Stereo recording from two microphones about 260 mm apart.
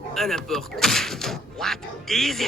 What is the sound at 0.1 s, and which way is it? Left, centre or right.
Speech, centre.